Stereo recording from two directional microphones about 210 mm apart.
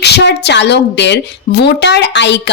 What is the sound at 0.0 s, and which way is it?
A woman's voice, 55° left (ahead or behind).